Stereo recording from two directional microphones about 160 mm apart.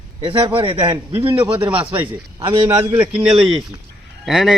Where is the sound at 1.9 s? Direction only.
30° right (ahead or behind).